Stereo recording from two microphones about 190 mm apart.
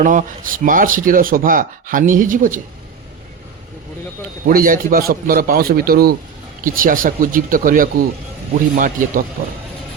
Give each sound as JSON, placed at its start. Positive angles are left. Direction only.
{"t": 0.0, "sound": "speech", "side_deg": -40}
{"t": 4.4, "sound": "speech", "side_deg": -45}